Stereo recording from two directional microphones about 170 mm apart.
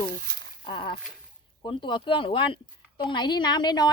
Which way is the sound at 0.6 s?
30° left (ahead or behind).